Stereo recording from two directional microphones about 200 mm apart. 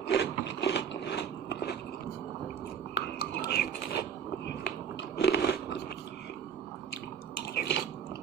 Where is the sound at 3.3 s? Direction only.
55° left (ahead or behind).